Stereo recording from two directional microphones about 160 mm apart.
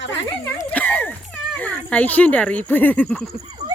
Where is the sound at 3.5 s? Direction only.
30° right (ahead or behind).